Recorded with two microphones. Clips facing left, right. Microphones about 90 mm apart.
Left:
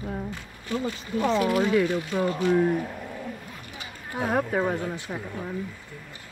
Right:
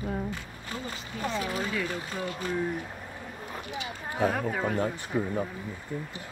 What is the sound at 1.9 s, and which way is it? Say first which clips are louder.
Speech: left 7 dB; 35° right (ahead or behind).